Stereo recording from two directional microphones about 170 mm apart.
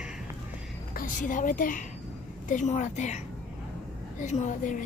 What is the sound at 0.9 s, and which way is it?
Speech, 50° left (ahead or behind).